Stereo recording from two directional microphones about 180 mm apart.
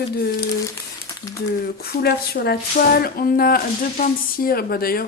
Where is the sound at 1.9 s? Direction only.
60° left (ahead or behind).